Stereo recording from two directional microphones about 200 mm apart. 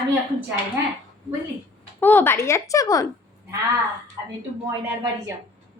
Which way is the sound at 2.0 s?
10° left (ahead or behind).